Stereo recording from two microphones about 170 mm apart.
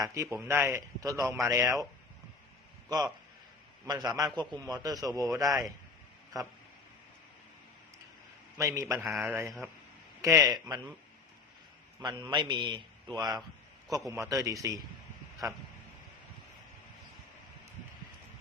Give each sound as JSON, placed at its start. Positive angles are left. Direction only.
{"t": 0.0, "sound": "a man's voice", "side_deg": -15}
{"t": 3.8, "sound": "a man's voice", "side_deg": -20}
{"t": 5.5, "sound": "speech", "side_deg": 0}
{"t": 6.3, "sound": "a man's voice", "side_deg": -20}
{"t": 8.5, "sound": "a man's voice", "side_deg": -20}
{"t": 11.9, "sound": "a man's voice", "side_deg": -25}